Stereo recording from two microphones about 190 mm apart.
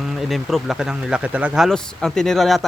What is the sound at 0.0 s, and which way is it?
Speech, centre (ahead or behind).